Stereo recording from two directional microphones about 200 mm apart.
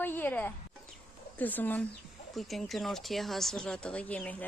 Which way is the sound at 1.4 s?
10° left (ahead or behind).